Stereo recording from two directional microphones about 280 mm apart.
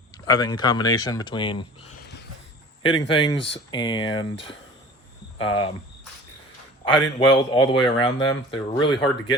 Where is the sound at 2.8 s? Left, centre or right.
Centre.